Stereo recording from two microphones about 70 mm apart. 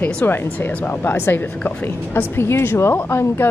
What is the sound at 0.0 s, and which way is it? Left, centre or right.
Speech, left.